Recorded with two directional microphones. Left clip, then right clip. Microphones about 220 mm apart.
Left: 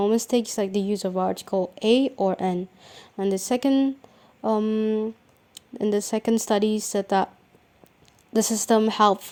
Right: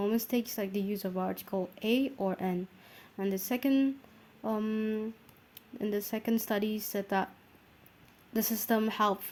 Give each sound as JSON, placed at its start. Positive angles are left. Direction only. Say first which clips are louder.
{"t": 0.0, "sound": "speech", "louder": "left 10 dB", "side_deg": 30}
{"t": 4.4, "sound": "a sound", "louder": "left 10 dB", "side_deg": 30}
{"t": 5.5, "sound": "speech", "louder": "left 10 dB", "side_deg": 35}
{"t": 8.3, "sound": "speech", "louder": "left 10 dB", "side_deg": 35}